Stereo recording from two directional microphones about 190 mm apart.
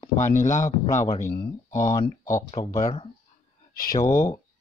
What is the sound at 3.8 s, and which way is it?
Speech, 50° left (ahead or behind).